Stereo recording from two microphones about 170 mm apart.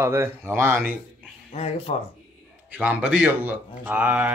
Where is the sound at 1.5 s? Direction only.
35° left (ahead or behind).